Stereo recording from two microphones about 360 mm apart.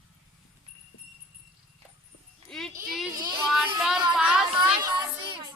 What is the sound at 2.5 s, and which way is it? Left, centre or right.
A child's voice, centre.